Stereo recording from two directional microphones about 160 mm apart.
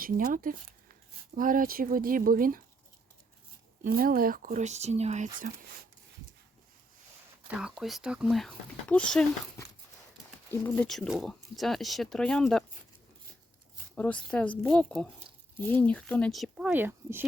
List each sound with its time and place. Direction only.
0.0 s speech: 55° right (ahead or behind)
3.8 s speech: 65° right (ahead or behind); by 5.3 s 45° right (ahead or behind)
7.5 s speech: 5° right (ahead or behind)
10.5 s speech: 15° left (ahead or behind)
10.8 s speech: centre (ahead or behind)
13.9 s speech: 10° left (ahead or behind); by 17.2 s 10° right (ahead or behind)